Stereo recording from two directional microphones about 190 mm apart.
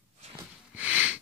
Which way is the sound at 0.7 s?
5° right (ahead or behind).